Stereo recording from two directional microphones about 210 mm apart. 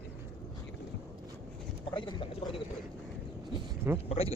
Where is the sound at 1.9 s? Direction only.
25° left (ahead or behind).